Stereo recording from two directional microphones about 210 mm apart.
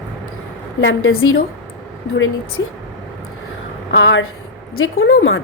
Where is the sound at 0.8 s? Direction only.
65° left (ahead or behind).